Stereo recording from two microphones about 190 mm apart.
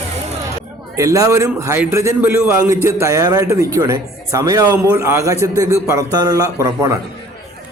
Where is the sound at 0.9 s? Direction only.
20° right (ahead or behind).